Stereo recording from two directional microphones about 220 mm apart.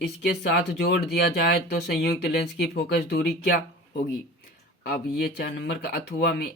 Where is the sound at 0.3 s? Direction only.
45° left (ahead or behind).